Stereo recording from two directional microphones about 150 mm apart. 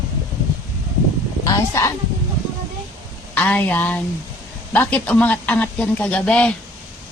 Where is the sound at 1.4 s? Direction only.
20° left (ahead or behind).